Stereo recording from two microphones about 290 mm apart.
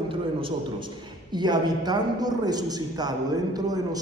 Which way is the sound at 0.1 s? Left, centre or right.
Centre.